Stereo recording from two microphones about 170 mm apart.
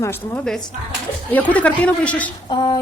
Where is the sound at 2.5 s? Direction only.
25° left (ahead or behind).